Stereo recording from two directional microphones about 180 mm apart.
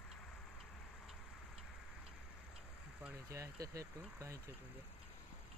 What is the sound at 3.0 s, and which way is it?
Speech, 15° right (ahead or behind).